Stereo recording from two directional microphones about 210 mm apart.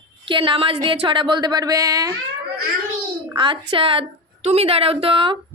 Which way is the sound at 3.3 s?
25° right (ahead or behind).